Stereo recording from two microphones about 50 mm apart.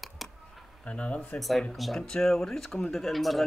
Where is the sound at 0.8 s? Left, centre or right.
Left.